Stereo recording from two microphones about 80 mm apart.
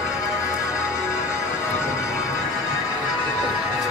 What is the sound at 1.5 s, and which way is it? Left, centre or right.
Music, left.